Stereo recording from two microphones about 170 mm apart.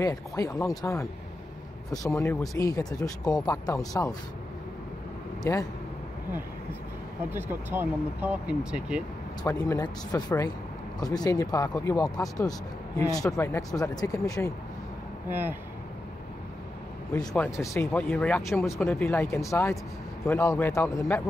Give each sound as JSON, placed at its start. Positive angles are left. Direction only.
{"t": 0.0, "sound": "speech", "side_deg": 20}
{"t": 5.4, "sound": "speech", "side_deg": 20}
{"t": 7.2, "sound": "speech", "side_deg": -10}
{"t": 9.4, "sound": "speech", "side_deg": 20}
{"t": 15.2, "sound": "speech", "side_deg": -10}
{"t": 17.4, "sound": "speech", "side_deg": 15}